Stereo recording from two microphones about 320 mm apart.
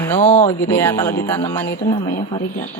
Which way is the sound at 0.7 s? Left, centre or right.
Centre.